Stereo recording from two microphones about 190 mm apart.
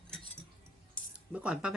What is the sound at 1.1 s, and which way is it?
Speech, 5° right (ahead or behind).